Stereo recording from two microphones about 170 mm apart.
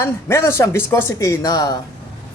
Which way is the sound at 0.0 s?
15° left (ahead or behind).